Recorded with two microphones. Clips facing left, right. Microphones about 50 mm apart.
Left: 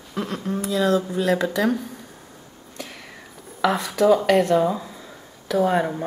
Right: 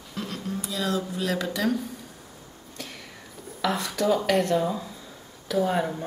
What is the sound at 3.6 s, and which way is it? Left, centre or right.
Speech, centre.